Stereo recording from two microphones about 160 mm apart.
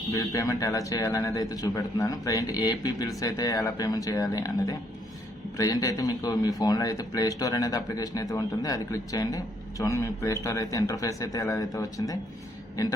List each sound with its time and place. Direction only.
0.1 s a man's voice: 20° left (ahead or behind)